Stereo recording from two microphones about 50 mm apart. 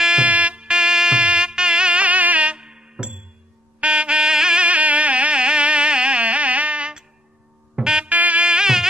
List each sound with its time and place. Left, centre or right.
0.0 s music: centre
0.3 s music: right
4.6 s carnatic music: right
7.7 s music: centre
8.1 s music: right
8.5 s mosquito: centre